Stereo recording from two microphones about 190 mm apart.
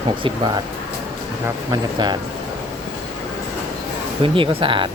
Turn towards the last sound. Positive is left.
turn(degrees=-25)  # may be behind; listen again after turning